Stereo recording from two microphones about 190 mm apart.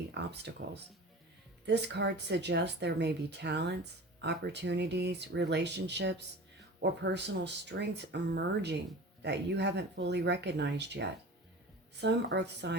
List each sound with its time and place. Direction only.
0.1 s speech: 65° right (ahead or behind)